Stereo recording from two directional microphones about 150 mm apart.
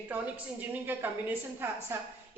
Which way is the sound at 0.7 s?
15° right (ahead or behind).